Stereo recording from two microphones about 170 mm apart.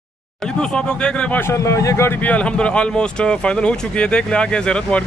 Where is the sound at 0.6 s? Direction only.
5° left (ahead or behind).